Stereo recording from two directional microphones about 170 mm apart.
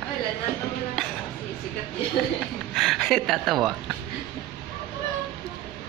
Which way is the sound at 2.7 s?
Centre (ahead or behind).